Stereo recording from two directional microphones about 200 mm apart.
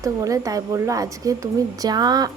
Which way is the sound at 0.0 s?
15° right (ahead or behind).